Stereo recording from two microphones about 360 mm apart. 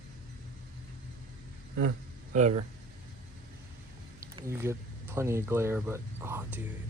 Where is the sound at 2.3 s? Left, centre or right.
Centre.